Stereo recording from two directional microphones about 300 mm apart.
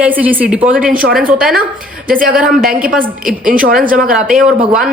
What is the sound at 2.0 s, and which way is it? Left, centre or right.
A woman's voice, right.